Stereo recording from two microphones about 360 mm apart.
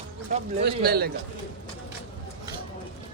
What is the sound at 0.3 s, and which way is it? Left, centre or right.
Speech, right.